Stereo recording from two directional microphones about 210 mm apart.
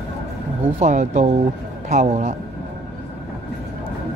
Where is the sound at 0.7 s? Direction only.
35° right (ahead or behind).